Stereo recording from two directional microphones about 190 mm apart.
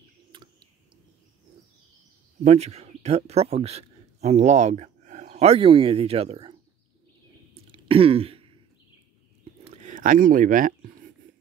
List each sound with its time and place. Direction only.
0.3 s bird: 25° right (ahead or behind)
2.4 s a man's voice: 35° right (ahead or behind)
7.7 s throat clearing: 30° right (ahead or behind)
9.4 s a sound: 35° right (ahead or behind)